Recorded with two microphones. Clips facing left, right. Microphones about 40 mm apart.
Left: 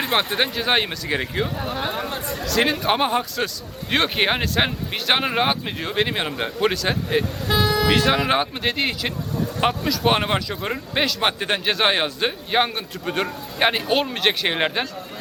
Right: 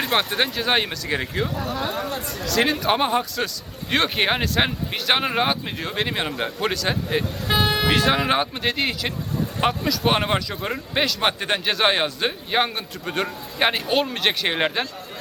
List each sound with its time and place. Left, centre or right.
0.0 s speech: centre
1.5 s speech: left
2.4 s speech: centre
7.4 s vehicle: right
7.9 s speech: centre